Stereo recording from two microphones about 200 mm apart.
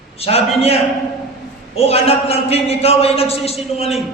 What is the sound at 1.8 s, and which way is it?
A man's voice, 30° left (ahead or behind).